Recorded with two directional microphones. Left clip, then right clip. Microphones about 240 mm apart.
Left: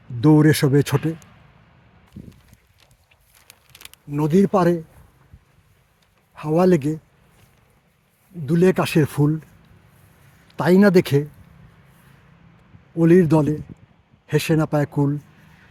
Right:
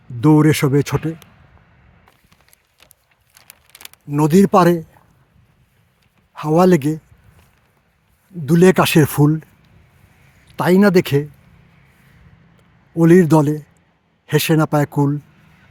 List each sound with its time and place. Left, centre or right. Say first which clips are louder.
0.2 s speech: right 2 dB; centre
3.4 s a sound: right 3 dB; right
4.1 s speech: right 5 dB; centre
6.3 s speech: right 4 dB; centre
8.4 s speech: right 6 dB; centre
10.5 s speech: right 2 dB; centre
13.0 s speech: right 4 dB; centre